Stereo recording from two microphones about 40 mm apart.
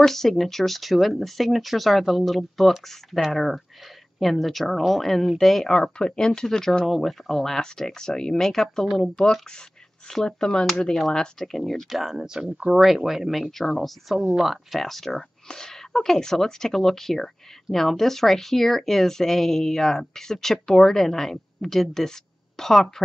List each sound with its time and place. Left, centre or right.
0.0 s speech: centre
5.9 s speech: left
6.2 s speech: centre
8.0 s speech: centre
11.9 s speech: centre
12.3 s speech: centre
12.7 s speech: centre
14.3 s speech: centre